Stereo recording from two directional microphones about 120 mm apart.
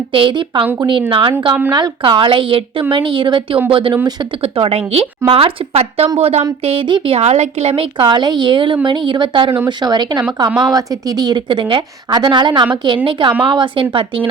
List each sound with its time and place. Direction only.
0.1 s speech: 45° right (ahead or behind)
6.7 s speech: 45° right (ahead or behind)
7.2 s a woman's voice: 65° right (ahead or behind); by 13.8 s 45° right (ahead or behind)